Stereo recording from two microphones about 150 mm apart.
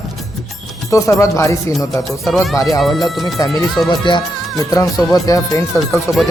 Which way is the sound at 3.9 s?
30° left (ahead or behind).